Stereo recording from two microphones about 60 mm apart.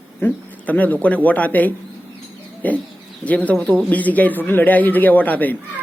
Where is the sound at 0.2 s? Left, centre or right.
Left.